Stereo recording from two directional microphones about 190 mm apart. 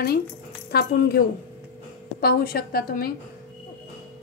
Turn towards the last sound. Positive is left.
turn(degrees=50)  # may be behind; listen again after turning